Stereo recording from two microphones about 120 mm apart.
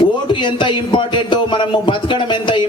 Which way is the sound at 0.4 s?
40° left (ahead or behind).